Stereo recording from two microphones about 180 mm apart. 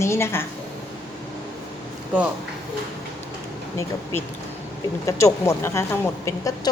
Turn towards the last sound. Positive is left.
turn(degrees=15)  # may be behind; listen again after turning